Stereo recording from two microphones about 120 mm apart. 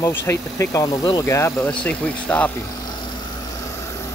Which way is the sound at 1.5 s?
10° left (ahead or behind).